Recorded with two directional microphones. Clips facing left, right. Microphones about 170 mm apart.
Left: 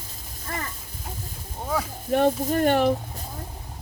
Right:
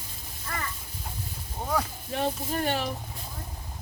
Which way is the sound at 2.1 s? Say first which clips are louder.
Left 11 dB; 55° left (ahead or behind).